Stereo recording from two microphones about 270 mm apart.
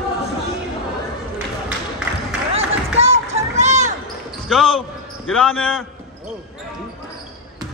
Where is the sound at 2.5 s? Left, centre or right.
Right.